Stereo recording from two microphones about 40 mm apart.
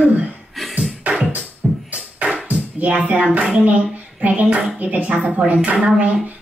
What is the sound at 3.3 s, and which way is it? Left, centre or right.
Speech, right.